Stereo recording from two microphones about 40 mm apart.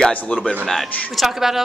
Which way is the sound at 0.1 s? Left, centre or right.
Left.